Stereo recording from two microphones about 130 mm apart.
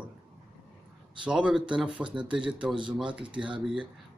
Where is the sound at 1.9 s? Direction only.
40° right (ahead or behind).